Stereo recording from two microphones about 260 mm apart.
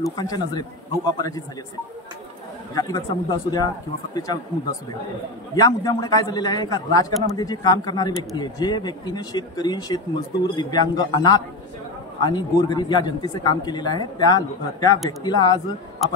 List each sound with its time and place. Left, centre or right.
0.0 s speech: centre
2.7 s speech: centre
5.6 s speech: centre